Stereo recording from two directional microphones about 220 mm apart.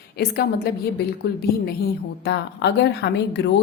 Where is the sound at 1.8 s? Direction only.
50° left (ahead or behind).